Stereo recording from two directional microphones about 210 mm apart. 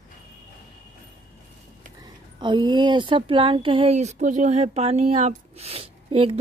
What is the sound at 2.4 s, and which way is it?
Speech, 20° right (ahead or behind).